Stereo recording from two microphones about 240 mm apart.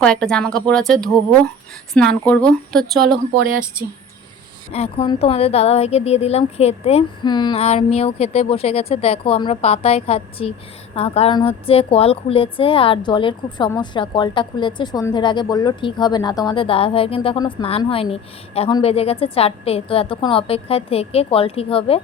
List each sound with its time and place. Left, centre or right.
0.0 s a woman's voice: centre
3.3 s speech: right
4.7 s a woman's voice: left